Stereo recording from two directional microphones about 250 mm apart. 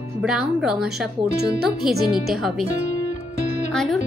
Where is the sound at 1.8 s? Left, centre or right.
Centre.